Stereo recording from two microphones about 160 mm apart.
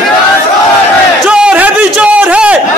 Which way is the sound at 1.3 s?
5° right (ahead or behind).